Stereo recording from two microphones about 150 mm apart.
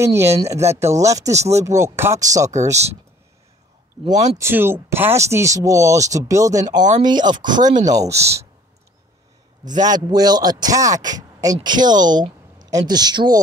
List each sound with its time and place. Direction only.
0.0 s speech: 20° right (ahead or behind)
4.0 s speech: 45° right (ahead or behind)
4.4 s speech: 15° right (ahead or behind)
9.8 s speech: 25° right (ahead or behind)